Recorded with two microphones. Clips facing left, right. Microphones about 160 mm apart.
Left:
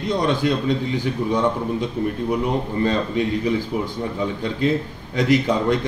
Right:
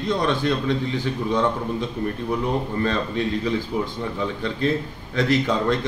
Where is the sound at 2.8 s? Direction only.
15° left (ahead or behind).